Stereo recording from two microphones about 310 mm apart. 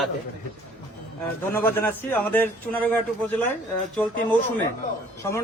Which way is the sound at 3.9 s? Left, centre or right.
Centre.